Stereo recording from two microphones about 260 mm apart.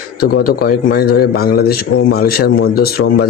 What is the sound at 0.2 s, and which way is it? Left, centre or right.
A man's voice, left.